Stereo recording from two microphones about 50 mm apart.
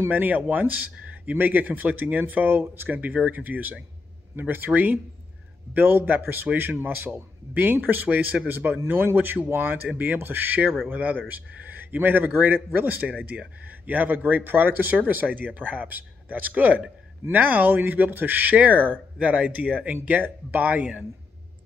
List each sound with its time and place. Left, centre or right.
0.1 s speech: right
2.9 s speech: right
5.7 s speech: right
13.3 s speech: right
13.7 s speech: right